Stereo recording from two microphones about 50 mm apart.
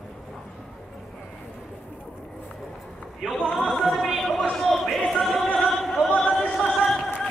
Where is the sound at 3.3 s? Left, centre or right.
Centre.